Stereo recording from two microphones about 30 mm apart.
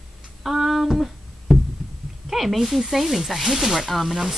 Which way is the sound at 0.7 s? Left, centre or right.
Centre.